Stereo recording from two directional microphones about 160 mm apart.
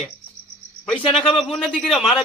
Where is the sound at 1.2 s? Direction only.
30° left (ahead or behind).